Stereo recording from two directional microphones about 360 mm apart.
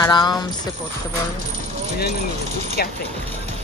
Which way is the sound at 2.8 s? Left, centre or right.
Left.